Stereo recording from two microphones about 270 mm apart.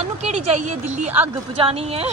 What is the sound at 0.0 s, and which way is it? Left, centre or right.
A woman's voice, right.